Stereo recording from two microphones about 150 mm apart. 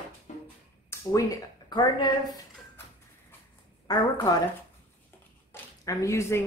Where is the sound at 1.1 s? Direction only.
25° left (ahead or behind).